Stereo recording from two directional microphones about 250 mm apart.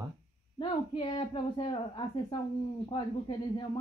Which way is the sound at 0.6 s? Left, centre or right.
Centre.